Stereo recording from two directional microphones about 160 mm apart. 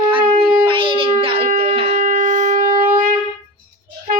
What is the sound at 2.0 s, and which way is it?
Wind instrument, 55° right (ahead or behind).